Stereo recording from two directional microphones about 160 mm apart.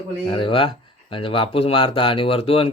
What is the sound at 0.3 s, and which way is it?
Speech, 30° left (ahead or behind).